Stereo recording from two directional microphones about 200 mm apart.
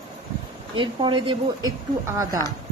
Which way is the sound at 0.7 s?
25° right (ahead or behind).